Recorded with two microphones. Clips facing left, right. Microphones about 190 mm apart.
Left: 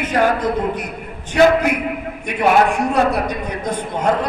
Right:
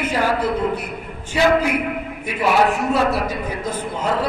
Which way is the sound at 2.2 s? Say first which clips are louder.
Left 3 dB; 5° right (ahead or behind).